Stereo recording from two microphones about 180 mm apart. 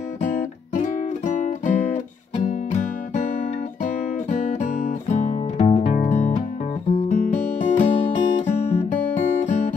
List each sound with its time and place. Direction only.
0.2 s music: 45° left (ahead or behind)
3.8 s guitar: 40° left (ahead or behind)
6.9 s music: 40° left (ahead or behind)